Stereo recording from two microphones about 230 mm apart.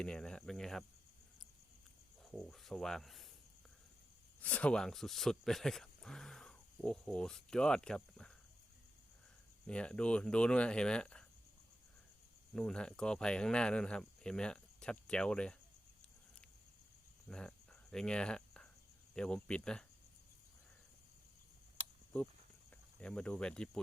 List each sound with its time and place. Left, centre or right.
0.0 s cricket: centre
2.2 s speech: centre
4.4 s speech: centre
9.6 s speech: centre
12.5 s speech: centre
17.2 s cricket: centre
19.1 s speech: centre
23.0 s speech: centre